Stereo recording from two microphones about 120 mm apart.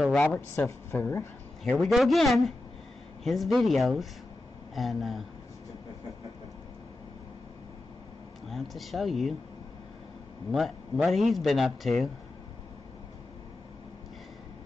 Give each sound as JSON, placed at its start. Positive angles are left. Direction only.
{"t": 0.1, "sound": "speech", "side_deg": 10}
{"t": 0.7, "sound": "speech", "side_deg": 20}
{"t": 1.7, "sound": "speech", "side_deg": 0}
{"t": 8.5, "sound": "speech", "side_deg": 0}
{"t": 10.5, "sound": "speech", "side_deg": 0}